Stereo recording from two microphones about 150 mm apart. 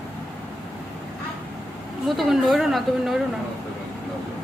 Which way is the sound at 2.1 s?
Centre (ahead or behind).